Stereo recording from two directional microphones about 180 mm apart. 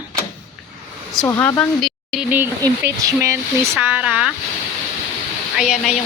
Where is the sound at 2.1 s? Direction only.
10° right (ahead or behind).